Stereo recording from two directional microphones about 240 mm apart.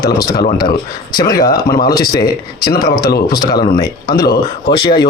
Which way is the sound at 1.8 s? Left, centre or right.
Left.